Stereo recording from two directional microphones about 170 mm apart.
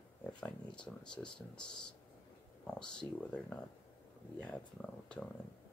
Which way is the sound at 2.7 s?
5° left (ahead or behind).